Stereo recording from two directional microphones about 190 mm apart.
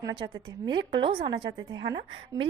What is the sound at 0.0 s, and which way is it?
A woman's voice, 20° right (ahead or behind).